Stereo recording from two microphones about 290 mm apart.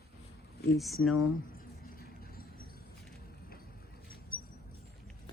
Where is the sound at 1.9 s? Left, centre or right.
Left.